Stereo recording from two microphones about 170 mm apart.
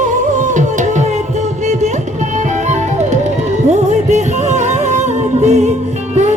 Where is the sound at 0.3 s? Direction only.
45° right (ahead or behind).